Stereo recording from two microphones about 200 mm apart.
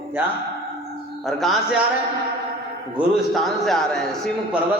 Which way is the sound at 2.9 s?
Centre (ahead or behind).